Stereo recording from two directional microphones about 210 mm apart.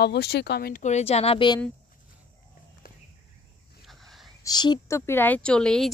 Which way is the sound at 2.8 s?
45° left (ahead or behind).